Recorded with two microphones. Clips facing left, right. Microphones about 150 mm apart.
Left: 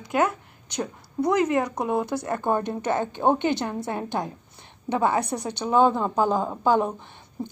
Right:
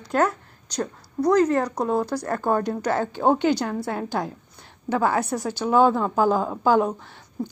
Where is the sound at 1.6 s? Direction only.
5° left (ahead or behind).